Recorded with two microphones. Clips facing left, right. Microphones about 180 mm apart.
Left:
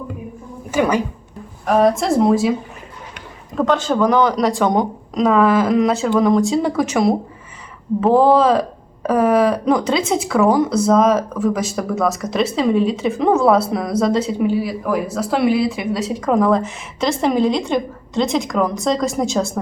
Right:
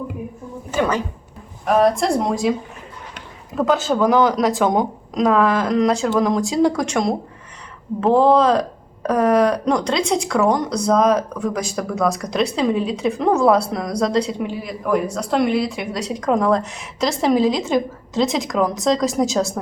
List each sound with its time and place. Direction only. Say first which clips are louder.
0.7 s a woman's voice: left 3 dB; 15° left (ahead or behind)
1.6 s speech: left 1 dB; centre (ahead or behind)